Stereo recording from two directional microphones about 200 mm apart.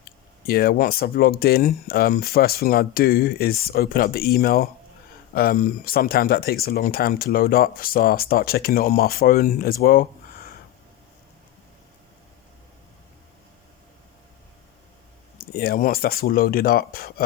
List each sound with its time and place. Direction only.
0.0 s speech: 50° left (ahead or behind)
15.4 s speech: 50° left (ahead or behind)